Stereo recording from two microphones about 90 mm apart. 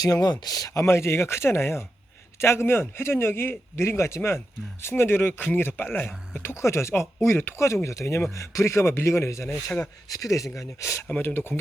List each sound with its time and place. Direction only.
0.0 s speech: 45° left (ahead or behind); by 11.6 s 25° left (ahead or behind)